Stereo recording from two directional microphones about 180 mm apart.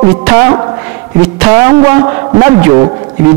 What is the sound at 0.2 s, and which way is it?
A man's voice, 20° right (ahead or behind).